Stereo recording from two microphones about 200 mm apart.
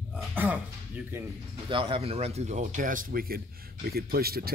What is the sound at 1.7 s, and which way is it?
Speech, 25° right (ahead or behind).